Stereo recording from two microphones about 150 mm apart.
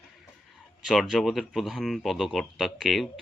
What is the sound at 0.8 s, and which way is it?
Speech, centre (ahead or behind).